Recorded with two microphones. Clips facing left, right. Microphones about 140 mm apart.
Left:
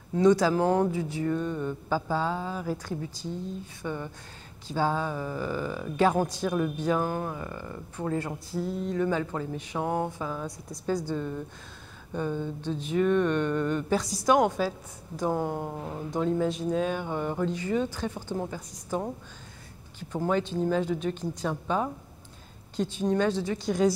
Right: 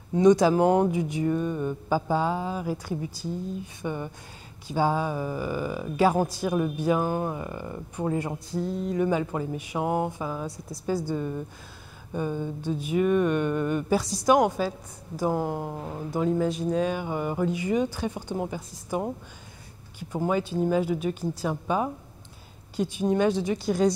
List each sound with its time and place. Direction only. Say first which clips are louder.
0.1 s speech: right 3 dB; 15° right (ahead or behind)
8.5 s a sound: right 1 dB; centre (ahead or behind)
8.9 s speech: right 3 dB; 15° right (ahead or behind)